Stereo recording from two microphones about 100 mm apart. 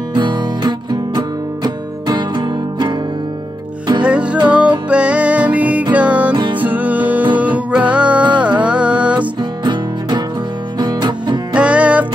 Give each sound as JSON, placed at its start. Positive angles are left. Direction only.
{"t": 0.1, "sound": "music", "side_deg": -50}
{"t": 4.0, "sound": "music", "side_deg": -10}
{"t": 6.3, "sound": "music", "side_deg": -50}
{"t": 6.6, "sound": "music", "side_deg": -15}
{"t": 9.2, "sound": "music", "side_deg": -50}
{"t": 11.5, "sound": "music", "side_deg": -10}